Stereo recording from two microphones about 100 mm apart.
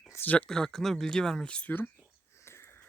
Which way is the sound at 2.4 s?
25° left (ahead or behind).